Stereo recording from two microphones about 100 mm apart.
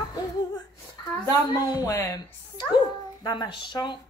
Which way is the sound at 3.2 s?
45° left (ahead or behind).